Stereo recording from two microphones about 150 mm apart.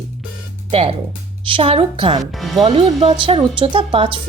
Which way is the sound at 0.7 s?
40° right (ahead or behind).